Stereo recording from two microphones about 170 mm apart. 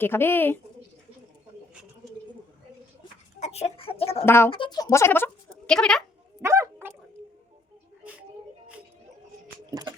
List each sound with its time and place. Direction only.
0.0 s speech: 15° left (ahead or behind)
3.4 s speech: 40° left (ahead or behind)
4.3 s speech: 15° left (ahead or behind)
4.5 s speech: 25° left (ahead or behind); by 6.0 s 5° left (ahead or behind)
6.4 s dog: 15° right (ahead or behind)
9.6 s music: 20° right (ahead or behind)